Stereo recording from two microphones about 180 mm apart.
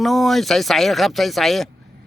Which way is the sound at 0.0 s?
Centre (ahead or behind).